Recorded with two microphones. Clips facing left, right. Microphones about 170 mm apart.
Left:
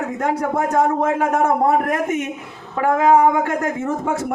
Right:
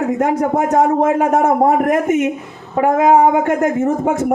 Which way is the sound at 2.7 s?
20° right (ahead or behind).